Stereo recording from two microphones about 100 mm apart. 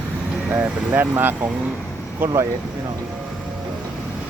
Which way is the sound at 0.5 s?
15° right (ahead or behind).